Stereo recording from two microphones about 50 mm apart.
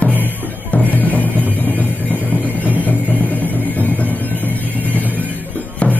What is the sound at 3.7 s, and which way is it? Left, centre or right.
Music, left.